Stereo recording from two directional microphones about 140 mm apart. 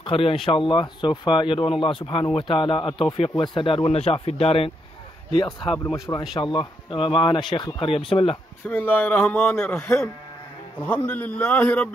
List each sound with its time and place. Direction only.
0.0 s speech: 40° left (ahead or behind)
5.9 s speech: 20° left (ahead or behind)
6.4 s speech: 35° left (ahead or behind)
8.6 s speech: 15° left (ahead or behind)